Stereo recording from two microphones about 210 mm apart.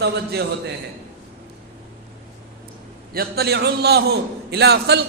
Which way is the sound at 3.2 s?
50° right (ahead or behind).